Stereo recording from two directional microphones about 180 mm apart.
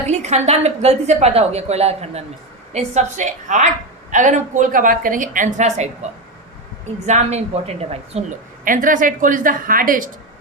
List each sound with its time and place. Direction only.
0.1 s a woman's voice: 40° right (ahead or behind)
8.6 s a woman's voice: 50° right (ahead or behind)